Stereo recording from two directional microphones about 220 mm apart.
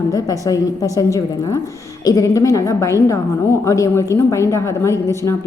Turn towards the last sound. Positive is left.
turn(degrees=10)  # may be behind; listen again after turning